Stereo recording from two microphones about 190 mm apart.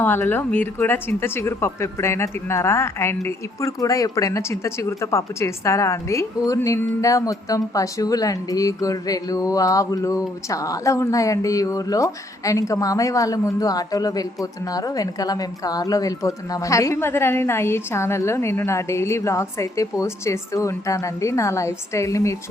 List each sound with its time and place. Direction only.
0.0 s a woman's voice: 10° left (ahead or behind)